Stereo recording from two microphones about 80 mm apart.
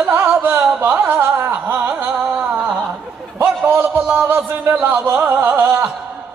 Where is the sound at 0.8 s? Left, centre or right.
Right.